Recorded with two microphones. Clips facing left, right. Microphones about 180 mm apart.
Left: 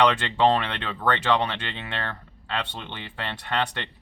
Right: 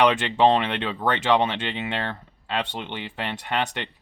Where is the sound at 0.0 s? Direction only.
15° right (ahead or behind).